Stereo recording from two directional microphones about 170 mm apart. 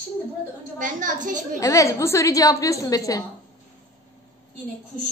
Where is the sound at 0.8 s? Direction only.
50° right (ahead or behind).